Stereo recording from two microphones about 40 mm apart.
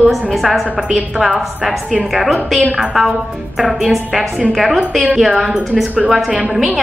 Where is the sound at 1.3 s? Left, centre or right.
Right.